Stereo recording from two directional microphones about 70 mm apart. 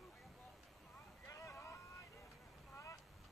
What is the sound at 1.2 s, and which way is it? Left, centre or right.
Vehicle, left.